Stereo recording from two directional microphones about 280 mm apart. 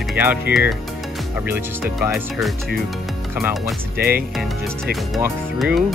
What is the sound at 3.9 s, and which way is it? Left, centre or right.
Speech, right.